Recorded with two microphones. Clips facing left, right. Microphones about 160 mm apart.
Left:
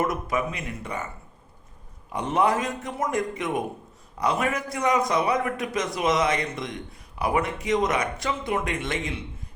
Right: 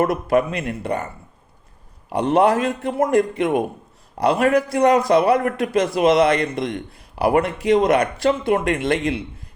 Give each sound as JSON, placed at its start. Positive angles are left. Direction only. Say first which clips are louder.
{"t": 0.0, "sound": "a man's voice", "louder": "right 8 dB", "side_deg": -65}
{"t": 2.1, "sound": "a man's voice", "louder": "right 7 dB", "side_deg": -70}